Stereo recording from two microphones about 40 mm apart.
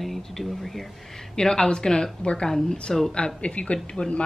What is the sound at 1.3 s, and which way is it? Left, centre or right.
A woman's voice, centre.